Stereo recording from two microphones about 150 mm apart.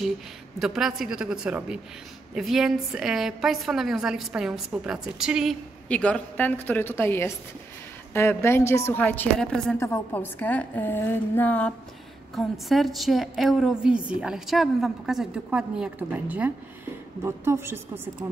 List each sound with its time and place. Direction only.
0.6 s a woman's voice: 5° right (ahead or behind)
5.9 s a woman's voice: 10° left (ahead or behind)
9.8 s a woman's voice: 20° left (ahead or behind)
12.4 s a woman's voice: centre (ahead or behind); by 18.0 s 15° right (ahead or behind)